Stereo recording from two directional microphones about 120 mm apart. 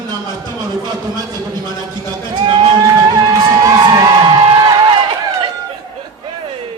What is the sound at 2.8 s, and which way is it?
Crowd, 35° right (ahead or behind).